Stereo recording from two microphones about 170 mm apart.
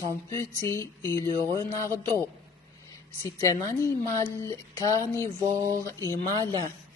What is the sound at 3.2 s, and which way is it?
Speech, 20° left (ahead or behind).